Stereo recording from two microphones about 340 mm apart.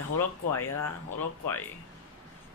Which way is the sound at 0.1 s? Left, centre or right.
Left.